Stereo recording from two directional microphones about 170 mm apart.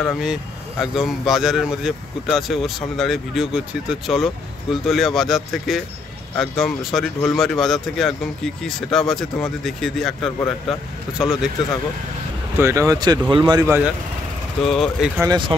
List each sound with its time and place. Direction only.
0.0 s speech: centre (ahead or behind)
12.5 s speech: 15° right (ahead or behind)
14.6 s speech: centre (ahead or behind)
15.1 s speech: 25° right (ahead or behind)